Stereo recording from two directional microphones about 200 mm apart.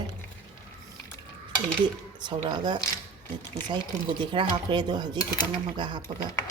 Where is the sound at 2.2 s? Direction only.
20° right (ahead or behind).